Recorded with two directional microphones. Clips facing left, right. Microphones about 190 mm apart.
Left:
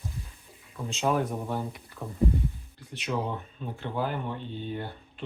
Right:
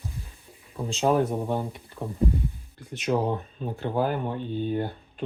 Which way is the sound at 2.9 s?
45° right (ahead or behind).